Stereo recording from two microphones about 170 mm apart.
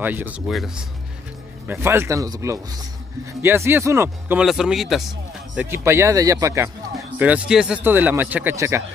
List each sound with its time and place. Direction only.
0.0 s speech: 10° right (ahead or behind)
1.7 s speech: 15° right (ahead or behind)
4.5 s speech: centre (ahead or behind)
5.7 s speech: 15° right (ahead or behind)